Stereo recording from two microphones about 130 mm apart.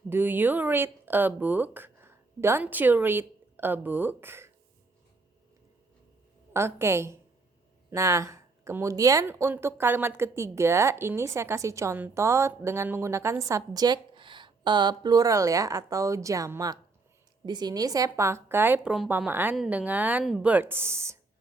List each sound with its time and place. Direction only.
0.1 s speech: 15° right (ahead or behind)
6.5 s speech: 20° right (ahead or behind)